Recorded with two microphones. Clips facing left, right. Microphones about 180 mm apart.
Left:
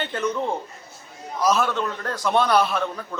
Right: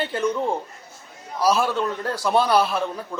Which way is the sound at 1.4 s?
35° right (ahead or behind).